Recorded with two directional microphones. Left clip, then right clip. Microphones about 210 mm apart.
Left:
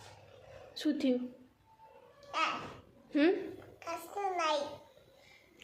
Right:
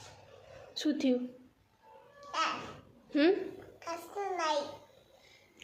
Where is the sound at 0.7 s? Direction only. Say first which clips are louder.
Right 1 dB; 5° right (ahead or behind).